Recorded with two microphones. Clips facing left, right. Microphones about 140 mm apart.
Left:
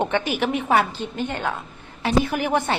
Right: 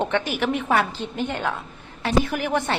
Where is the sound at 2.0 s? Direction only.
20° left (ahead or behind).